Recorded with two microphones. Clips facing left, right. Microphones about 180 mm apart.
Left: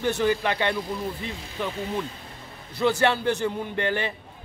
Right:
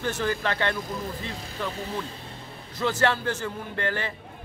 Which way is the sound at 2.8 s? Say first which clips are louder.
Left 3 dB; 15° left (ahead or behind).